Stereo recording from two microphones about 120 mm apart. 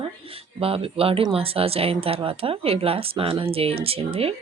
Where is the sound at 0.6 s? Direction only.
50° right (ahead or behind).